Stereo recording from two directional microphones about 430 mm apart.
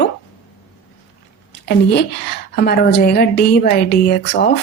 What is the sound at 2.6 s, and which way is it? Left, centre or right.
A woman's voice, left.